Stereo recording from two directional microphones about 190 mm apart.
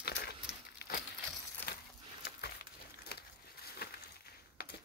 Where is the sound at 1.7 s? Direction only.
60° left (ahead or behind).